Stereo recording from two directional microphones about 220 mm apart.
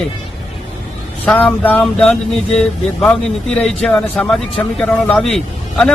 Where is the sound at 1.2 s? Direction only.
5° left (ahead or behind).